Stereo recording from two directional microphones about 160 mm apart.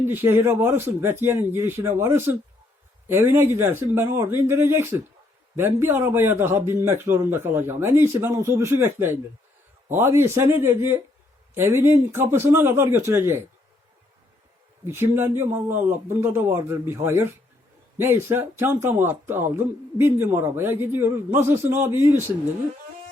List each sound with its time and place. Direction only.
0.0 s speech: 15° right (ahead or behind)
14.8 s speech: 15° right (ahead or behind)